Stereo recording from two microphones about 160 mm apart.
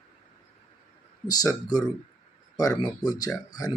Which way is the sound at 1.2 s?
25° left (ahead or behind).